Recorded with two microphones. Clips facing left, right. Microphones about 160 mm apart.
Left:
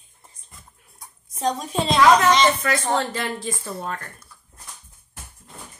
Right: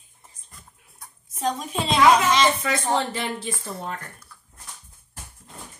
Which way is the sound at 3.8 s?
20° right (ahead or behind).